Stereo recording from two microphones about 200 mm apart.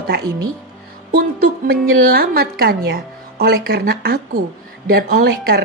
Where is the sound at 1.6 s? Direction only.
50° right (ahead or behind).